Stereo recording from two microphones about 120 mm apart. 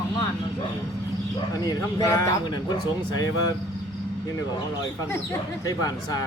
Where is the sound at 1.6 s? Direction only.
30° left (ahead or behind).